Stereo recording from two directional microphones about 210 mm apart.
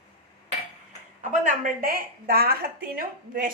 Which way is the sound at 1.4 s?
45° right (ahead or behind).